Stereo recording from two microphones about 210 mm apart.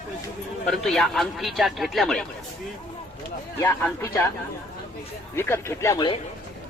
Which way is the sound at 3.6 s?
10° left (ahead or behind).